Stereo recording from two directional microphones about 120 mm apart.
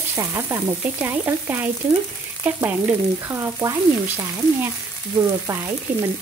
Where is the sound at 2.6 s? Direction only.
15° right (ahead or behind).